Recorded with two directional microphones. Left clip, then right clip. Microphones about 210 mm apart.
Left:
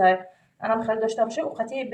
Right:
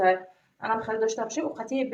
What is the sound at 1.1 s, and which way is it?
Speech, 30° right (ahead or behind).